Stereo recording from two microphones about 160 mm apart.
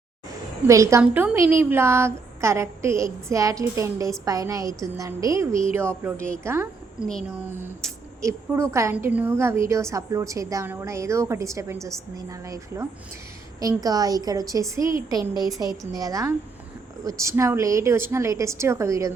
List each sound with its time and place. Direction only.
0.7 s a woman's voice: 20° right (ahead or behind)